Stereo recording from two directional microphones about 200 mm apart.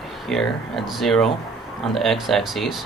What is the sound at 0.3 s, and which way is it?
Speech, centre (ahead or behind).